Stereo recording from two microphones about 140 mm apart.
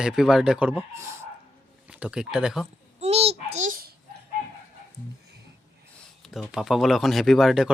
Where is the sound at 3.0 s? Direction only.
50° right (ahead or behind); by 3.9 s 80° right.